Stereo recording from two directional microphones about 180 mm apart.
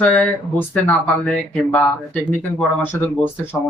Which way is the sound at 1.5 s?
10° left (ahead or behind).